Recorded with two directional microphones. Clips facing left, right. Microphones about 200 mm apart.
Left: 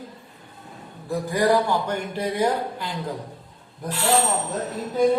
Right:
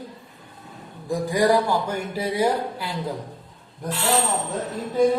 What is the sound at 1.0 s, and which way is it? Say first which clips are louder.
Speech: right 1 dB; 10° right (ahead or behind).